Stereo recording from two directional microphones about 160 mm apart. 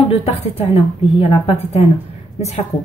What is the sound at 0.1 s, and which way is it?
A woman's voice, 40° left (ahead or behind).